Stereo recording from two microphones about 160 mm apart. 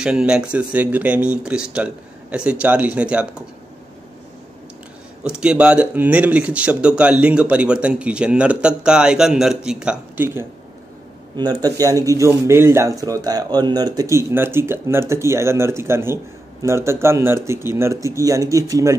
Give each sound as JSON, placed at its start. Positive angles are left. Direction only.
{"t": 0.0, "sound": "speech", "side_deg": -5}
{"t": 5.2, "sound": "speech", "side_deg": -5}
{"t": 11.3, "sound": "speech", "side_deg": -25}